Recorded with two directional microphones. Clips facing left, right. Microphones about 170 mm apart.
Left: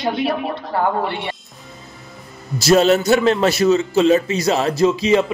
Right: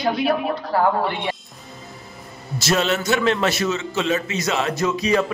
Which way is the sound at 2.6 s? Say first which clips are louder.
Left 8 dB; 35° left (ahead or behind).